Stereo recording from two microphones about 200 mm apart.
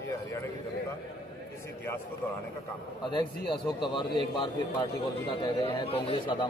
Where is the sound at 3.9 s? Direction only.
25° left (ahead or behind).